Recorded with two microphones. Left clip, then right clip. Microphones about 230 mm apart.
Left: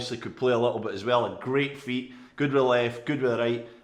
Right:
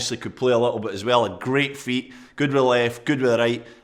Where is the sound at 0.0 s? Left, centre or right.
Right.